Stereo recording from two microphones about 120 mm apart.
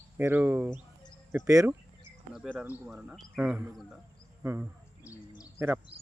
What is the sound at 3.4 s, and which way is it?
Speech, 15° right (ahead or behind).